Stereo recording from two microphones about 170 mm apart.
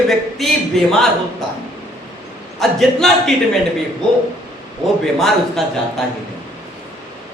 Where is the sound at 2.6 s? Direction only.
Centre (ahead or behind).